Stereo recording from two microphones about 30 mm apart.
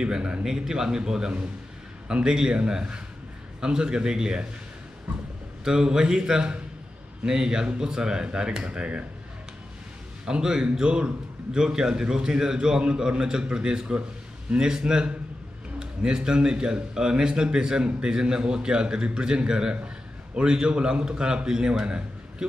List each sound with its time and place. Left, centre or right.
0.0 s a man's voice: right
0.4 s a man's voice: right
5.6 s a man's voice: right
10.4 s a man's voice: right